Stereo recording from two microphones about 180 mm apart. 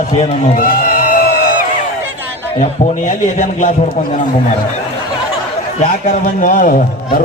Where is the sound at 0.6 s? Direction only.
50° left (ahead or behind).